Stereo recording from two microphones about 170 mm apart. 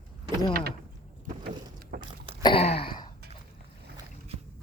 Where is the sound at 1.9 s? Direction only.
75° right (ahead or behind).